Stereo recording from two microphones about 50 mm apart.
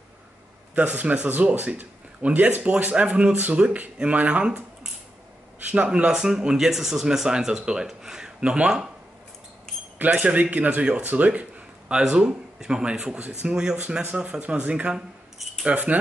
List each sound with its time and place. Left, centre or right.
0.7 s speech: right
6.1 s speech: centre
9.9 s speech: right
11.9 s speech: centre